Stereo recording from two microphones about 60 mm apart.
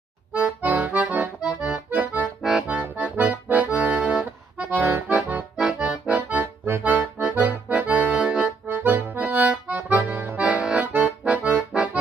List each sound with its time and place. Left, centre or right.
0.3 s accordion: right
5.6 s accordion: centre
8.2 s accordion: centre
8.6 s accordion: right
10.9 s accordion: right